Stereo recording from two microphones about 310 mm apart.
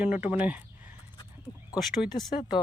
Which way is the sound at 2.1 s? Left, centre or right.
Centre.